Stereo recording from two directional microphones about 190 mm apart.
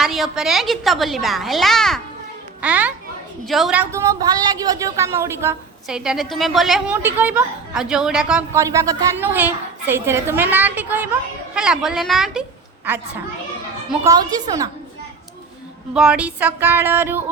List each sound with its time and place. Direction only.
0.0 s a woman's voice: centre (ahead or behind)
6.0 s a woman's voice: centre (ahead or behind)
8.5 s a woman's voice: 15° right (ahead or behind)
16.0 s a woman's voice: 5° right (ahead or behind)